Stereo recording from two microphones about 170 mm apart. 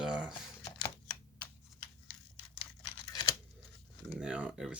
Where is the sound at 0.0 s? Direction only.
5° right (ahead or behind).